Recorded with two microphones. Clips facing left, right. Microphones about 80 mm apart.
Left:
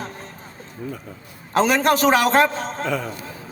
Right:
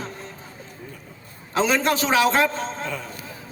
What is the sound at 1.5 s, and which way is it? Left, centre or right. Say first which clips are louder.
A man's voice: left 3 dB; left.